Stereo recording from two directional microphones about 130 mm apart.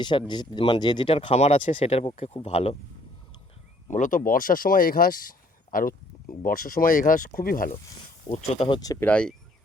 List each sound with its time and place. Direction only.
0.0 s speech: 35° left (ahead or behind); by 2.7 s 50° left (ahead or behind)
3.8 s speech: 75° left (ahead or behind); by 5.3 s 90° left
5.7 s a sound: 90° left
6.4 s speech: 90° left
8.5 s speech: 45° left (ahead or behind)
8.8 s speech: 25° left (ahead or behind)
9.0 s speech: 10° left (ahead or behind)